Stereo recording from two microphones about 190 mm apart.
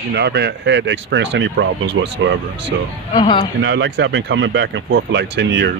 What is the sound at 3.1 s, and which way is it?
Speech, 25° left (ahead or behind).